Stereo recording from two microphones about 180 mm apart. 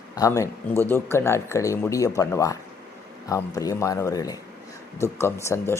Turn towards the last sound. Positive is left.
turn(degrees=15)  # may be behind; listen again after turning